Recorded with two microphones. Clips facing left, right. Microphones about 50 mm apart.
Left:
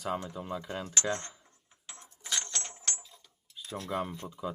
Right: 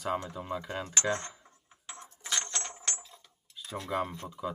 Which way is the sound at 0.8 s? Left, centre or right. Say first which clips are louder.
Right 2 dB; right.